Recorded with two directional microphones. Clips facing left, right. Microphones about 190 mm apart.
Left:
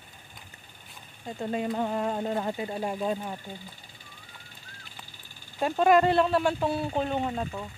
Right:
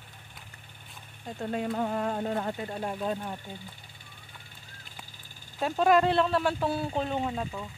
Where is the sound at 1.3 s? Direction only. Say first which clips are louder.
Left 1 dB; 5° left (ahead or behind).